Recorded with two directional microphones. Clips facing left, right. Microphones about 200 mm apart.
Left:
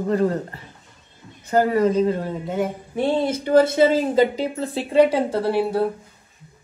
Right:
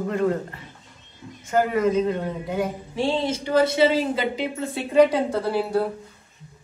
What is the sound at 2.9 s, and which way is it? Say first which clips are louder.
Speech: left 3 dB; 55° left (ahead or behind).